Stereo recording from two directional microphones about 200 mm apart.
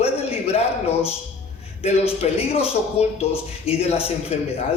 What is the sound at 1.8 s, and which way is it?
A man's voice, 30° left (ahead or behind).